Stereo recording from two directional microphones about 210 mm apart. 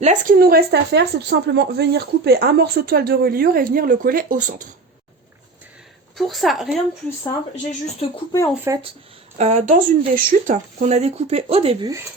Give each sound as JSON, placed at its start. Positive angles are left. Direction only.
{"t": 0.0, "sound": "speech", "side_deg": -35}
{"t": 6.1, "sound": "speech", "side_deg": 0}
{"t": 8.1, "sound": "speech", "side_deg": 15}
{"t": 8.7, "sound": "speech", "side_deg": -15}
{"t": 9.4, "sound": "speech", "side_deg": -35}